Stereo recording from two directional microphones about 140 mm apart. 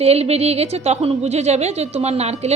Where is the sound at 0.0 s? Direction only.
45° right (ahead or behind).